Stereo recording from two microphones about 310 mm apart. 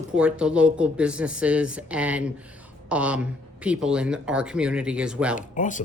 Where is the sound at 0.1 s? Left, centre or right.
Centre.